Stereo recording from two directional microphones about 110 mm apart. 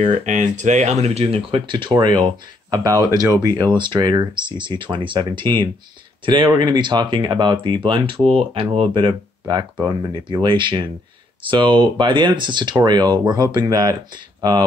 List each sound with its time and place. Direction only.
0.0 s speech: 90° right; by 14.6 s 40° right (ahead or behind)